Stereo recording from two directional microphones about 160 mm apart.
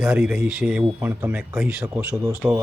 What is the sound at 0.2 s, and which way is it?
Speech, 10° right (ahead or behind).